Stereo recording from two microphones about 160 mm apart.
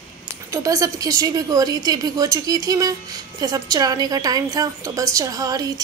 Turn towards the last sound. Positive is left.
turn(degrees=-25)  # may be behind; listen again after turning